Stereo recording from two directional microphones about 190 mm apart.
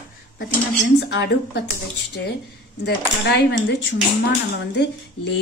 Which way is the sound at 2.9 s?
65° left (ahead or behind).